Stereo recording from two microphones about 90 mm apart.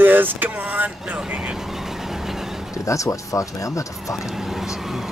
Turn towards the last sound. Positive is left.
turn(degrees=35)  # may be behind; listen again after turning